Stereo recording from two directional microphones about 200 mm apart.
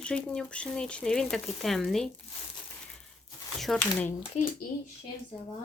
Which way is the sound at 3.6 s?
5° left (ahead or behind).